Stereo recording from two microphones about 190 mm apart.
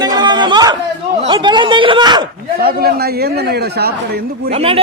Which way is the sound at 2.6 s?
55° right (ahead or behind).